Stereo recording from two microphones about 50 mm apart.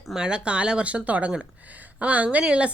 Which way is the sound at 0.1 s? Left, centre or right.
Centre.